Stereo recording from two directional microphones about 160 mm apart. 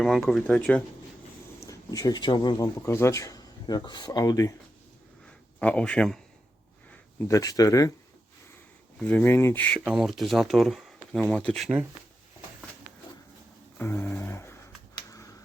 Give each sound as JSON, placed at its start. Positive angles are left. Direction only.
{"t": 0.0, "sound": "speech", "side_deg": 0}
{"t": 1.6, "sound": "speech", "side_deg": 20}
{"t": 5.2, "sound": "a sound", "side_deg": 5}
{"t": 7.2, "sound": "speech", "side_deg": 20}
{"t": 9.0, "sound": "speech", "side_deg": 10}
{"t": 9.8, "sound": "speech", "side_deg": 0}
{"t": 13.7, "sound": "speech", "side_deg": 15}
{"t": 14.9, "sound": "a sound", "side_deg": 20}